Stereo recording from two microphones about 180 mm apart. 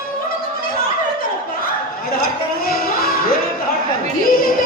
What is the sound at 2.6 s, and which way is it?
Music, 55° left (ahead or behind).